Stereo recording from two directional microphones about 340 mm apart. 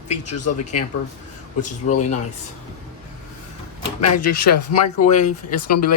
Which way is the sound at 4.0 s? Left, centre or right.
Left.